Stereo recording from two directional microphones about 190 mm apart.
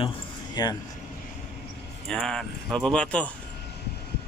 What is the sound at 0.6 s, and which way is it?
Speech, 20° left (ahead or behind).